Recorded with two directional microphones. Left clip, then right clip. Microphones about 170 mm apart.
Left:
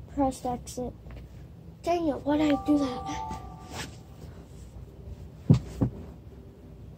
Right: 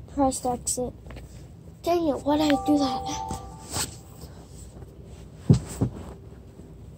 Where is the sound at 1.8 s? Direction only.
30° right (ahead or behind).